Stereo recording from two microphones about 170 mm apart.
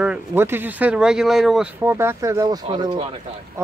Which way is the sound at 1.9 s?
15° right (ahead or behind).